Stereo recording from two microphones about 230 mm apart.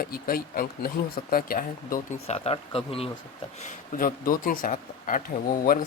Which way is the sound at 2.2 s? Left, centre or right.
Left.